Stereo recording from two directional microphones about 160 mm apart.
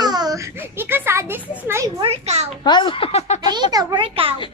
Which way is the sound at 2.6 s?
30° left (ahead or behind).